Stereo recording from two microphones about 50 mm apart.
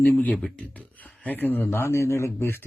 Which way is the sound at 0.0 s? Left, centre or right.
Left.